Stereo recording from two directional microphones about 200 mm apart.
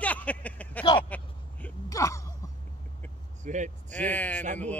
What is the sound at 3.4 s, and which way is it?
Speech, 35° right (ahead or behind).